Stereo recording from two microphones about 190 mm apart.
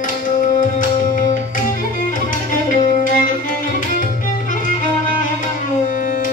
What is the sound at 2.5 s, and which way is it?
Music, 45° left (ahead or behind).